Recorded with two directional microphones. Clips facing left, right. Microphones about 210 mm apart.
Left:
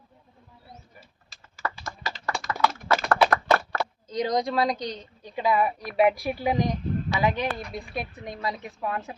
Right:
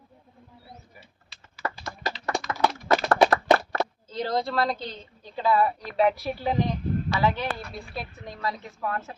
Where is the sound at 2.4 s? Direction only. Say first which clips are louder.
Left 1 dB; 45° left (ahead or behind).